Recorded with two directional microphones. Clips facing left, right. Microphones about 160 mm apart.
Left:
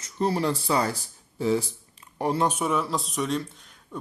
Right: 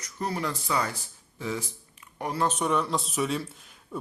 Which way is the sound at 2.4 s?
10° left (ahead or behind).